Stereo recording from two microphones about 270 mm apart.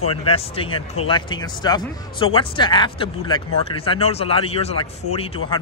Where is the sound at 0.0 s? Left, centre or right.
Left.